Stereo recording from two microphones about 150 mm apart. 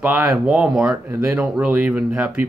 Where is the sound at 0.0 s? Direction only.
10° right (ahead or behind).